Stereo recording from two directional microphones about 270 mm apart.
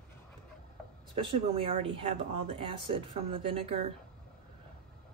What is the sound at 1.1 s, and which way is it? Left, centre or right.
Speech, centre.